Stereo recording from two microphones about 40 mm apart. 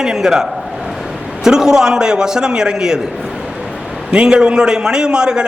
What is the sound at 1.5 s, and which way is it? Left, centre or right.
A man's voice, centre.